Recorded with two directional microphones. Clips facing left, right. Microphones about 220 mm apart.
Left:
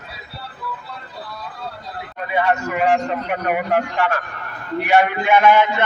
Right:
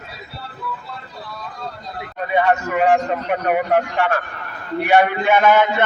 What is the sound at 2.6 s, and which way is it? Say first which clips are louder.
Speech: right 2 dB; 35° right (ahead or behind).